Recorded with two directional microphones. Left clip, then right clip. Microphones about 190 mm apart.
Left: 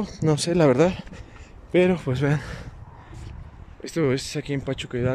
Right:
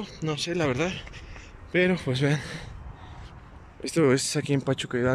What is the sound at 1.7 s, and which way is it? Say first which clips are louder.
A man's voice: left 4 dB; 10° left (ahead or behind).